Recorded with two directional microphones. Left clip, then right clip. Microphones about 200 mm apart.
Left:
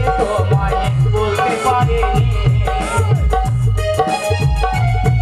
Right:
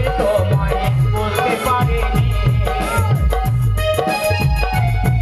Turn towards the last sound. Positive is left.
turn(degrees=-20)  # may be behind; listen again after turning